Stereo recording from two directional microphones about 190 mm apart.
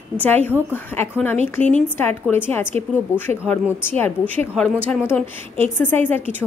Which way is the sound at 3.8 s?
10° left (ahead or behind).